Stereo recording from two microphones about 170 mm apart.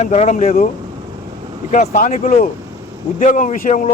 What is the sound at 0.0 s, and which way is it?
Speech, 40° left (ahead or behind).